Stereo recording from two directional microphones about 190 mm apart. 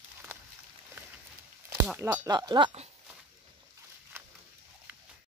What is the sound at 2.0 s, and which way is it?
Speech, 15° right (ahead or behind).